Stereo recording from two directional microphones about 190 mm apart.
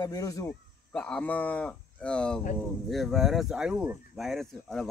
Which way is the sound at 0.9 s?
5° left (ahead or behind).